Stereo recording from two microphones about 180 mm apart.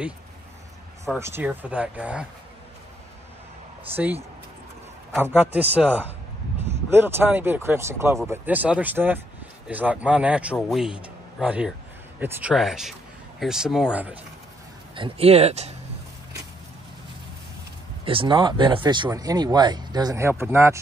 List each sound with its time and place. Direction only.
1.2 s speech: 10° right (ahead or behind)
3.9 s speech: 10° right (ahead or behind)
15.0 s speech: 30° right (ahead or behind)
18.0 s speech: 30° right (ahead or behind)